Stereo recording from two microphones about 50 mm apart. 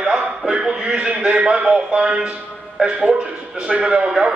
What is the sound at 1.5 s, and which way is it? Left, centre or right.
A man's voice, right.